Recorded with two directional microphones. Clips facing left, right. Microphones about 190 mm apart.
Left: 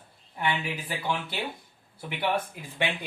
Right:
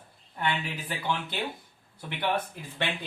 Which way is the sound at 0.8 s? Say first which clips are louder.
Right 2 dB; 10° left (ahead or behind).